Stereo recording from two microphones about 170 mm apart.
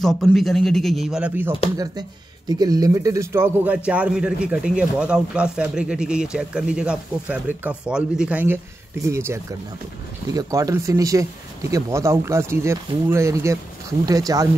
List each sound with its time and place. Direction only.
0.0 s a man's voice: centre (ahead or behind)
1.8 s speech: 25° right (ahead or behind)